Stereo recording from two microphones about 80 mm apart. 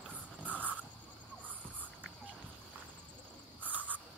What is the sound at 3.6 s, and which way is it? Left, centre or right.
Cricket, right.